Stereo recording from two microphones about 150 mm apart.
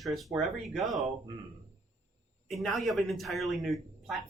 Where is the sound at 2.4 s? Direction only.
Centre (ahead or behind).